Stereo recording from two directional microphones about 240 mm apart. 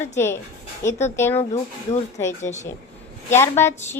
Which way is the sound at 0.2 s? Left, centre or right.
Centre.